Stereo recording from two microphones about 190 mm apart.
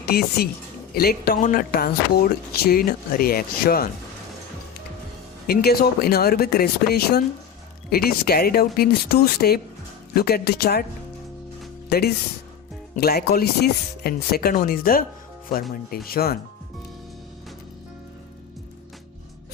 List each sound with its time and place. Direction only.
0.0 s a woman's voice: 55° left (ahead or behind)
5.5 s speech: 55° left (ahead or behind)
11.9 s speech: 55° left (ahead or behind)
16.0 s speech: 55° left (ahead or behind)